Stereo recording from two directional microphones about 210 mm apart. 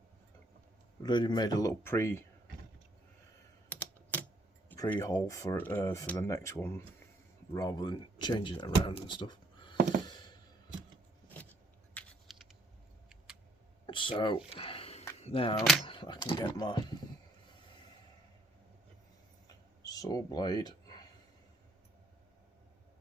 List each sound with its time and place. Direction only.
1.0 s speech: 20° left (ahead or behind)
3.7 s typing: 5° left (ahead or behind)
4.7 s speech: 10° left (ahead or behind)
11.9 s typing: centre (ahead or behind)
13.8 s a sound: 25° left (ahead or behind)
15.2 s speech: 25° left (ahead or behind)
19.8 s a sound: 15° left (ahead or behind)